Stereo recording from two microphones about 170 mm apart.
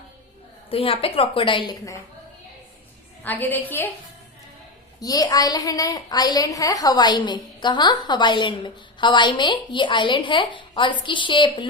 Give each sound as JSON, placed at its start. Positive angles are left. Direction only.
{"t": 0.7, "sound": "a woman's voice", "side_deg": 35}
{"t": 3.2, "sound": "a woman's voice", "side_deg": 10}
{"t": 4.9, "sound": "a woman's voice", "side_deg": 20}